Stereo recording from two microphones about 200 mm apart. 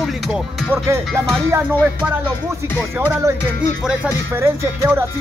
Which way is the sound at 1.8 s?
10° right (ahead or behind).